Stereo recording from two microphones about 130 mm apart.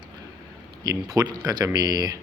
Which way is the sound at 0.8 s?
30° right (ahead or behind).